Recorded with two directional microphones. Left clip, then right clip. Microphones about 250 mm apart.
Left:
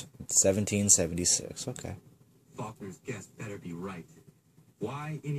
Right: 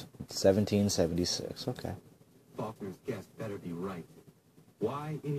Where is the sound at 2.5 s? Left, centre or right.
Left.